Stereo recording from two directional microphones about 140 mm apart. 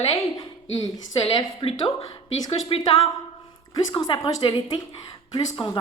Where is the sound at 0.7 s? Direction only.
25° left (ahead or behind).